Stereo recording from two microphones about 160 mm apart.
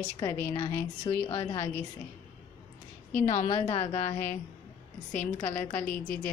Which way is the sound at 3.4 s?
35° left (ahead or behind).